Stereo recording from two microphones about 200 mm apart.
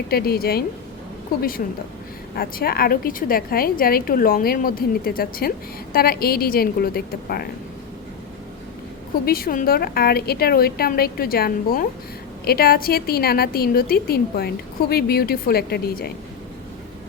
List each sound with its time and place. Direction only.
0.1 s a woman's voice: 50° left (ahead or behind)
9.2 s a woman's voice: 50° left (ahead or behind)